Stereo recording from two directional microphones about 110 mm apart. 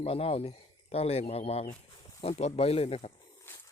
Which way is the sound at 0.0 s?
60° left (ahead or behind).